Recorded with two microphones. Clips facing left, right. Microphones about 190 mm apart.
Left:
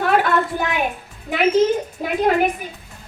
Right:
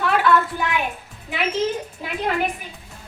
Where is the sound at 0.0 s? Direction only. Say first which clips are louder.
Left 1 dB; 45° left (ahead or behind).